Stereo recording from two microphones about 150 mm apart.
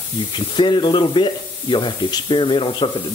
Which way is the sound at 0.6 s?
30° left (ahead or behind).